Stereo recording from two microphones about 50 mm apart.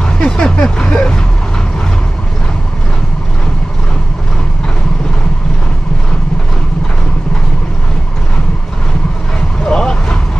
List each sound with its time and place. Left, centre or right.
0.0 s vehicle: centre
9.7 s vehicle: centre